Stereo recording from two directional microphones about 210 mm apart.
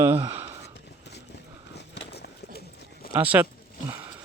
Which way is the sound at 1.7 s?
55° left (ahead or behind).